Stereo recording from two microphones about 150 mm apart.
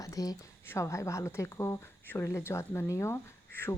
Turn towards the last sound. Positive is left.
turn(degrees=15)  # may be behind; listen again after turning